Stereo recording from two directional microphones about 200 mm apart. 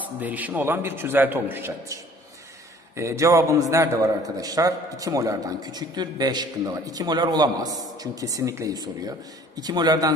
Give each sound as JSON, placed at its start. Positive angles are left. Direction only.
{"t": 0.0, "sound": "a man's voice", "side_deg": -10}
{"t": 3.0, "sound": "a man's voice", "side_deg": -15}